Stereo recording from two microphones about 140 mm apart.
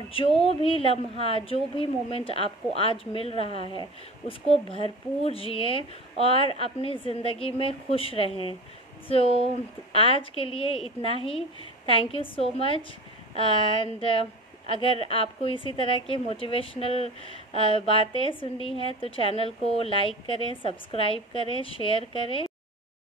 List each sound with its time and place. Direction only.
0.1 s a woman's voice: 40° left (ahead or behind)
3.6 s speech: 35° right (ahead or behind)
4.3 s a woman's voice: 40° left (ahead or behind)